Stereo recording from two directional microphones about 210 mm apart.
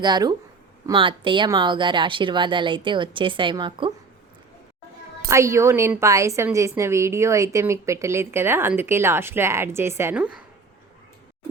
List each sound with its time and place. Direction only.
0.0 s speech: 20° right (ahead or behind)
5.3 s a woman's voice: 15° right (ahead or behind)